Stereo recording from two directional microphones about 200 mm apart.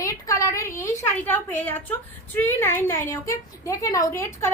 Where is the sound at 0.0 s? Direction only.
15° left (ahead or behind).